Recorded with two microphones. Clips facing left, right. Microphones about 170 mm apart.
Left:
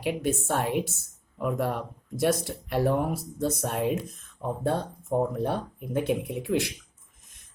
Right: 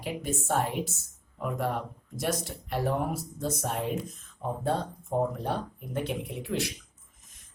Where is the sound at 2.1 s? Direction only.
65° left (ahead or behind).